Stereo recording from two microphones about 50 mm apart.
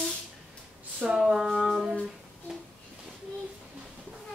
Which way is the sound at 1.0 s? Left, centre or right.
Centre.